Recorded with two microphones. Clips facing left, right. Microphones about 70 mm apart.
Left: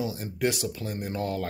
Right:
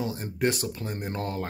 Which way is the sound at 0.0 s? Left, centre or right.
Right.